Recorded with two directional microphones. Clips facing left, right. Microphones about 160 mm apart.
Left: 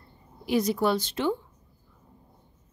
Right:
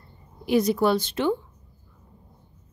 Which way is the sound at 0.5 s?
60° right (ahead or behind).